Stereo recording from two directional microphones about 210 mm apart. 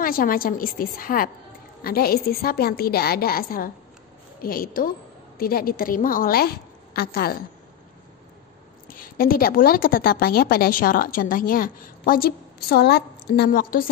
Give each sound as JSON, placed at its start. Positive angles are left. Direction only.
{"t": 0.0, "sound": "a woman's voice", "side_deg": 45}
{"t": 8.8, "sound": "a woman's voice", "side_deg": 45}